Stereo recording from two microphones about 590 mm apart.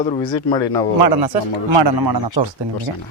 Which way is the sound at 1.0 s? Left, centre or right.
Right.